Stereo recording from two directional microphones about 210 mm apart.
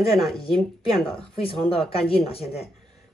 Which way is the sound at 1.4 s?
25° left (ahead or behind).